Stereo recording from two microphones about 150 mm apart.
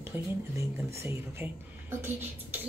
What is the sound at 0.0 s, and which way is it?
Speech, 15° right (ahead or behind).